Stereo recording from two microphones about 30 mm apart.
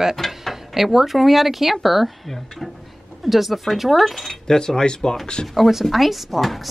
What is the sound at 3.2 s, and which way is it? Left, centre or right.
Speech, centre.